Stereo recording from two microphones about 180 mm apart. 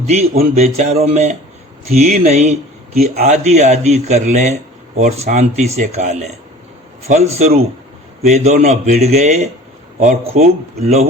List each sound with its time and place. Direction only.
0.5 s a man's voice: 40° right (ahead or behind)